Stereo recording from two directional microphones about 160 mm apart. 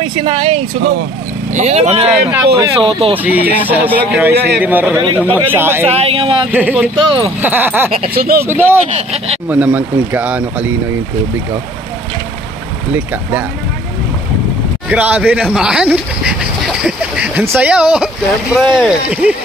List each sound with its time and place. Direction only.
0.0 s speech: 35° right (ahead or behind)
2.0 s speech: 10° right (ahead or behind)
2.8 s speech: 35° right (ahead or behind)
3.2 s speech: 10° right (ahead or behind)
5.9 s speech: 40° right (ahead or behind)
6.5 s speech: 10° right (ahead or behind)
7.0 s speech: 35° right (ahead or behind)
7.4 s speech: 10° right (ahead or behind)
8.1 s speech: 70° right (ahead or behind)
8.5 s speech: 15° right (ahead or behind)
12.9 s speech: 10° right (ahead or behind)
14.9 s speech: 10° right (ahead or behind)